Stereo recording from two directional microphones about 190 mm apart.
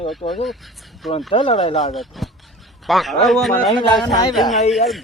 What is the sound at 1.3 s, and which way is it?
Speech, 30° left (ahead or behind).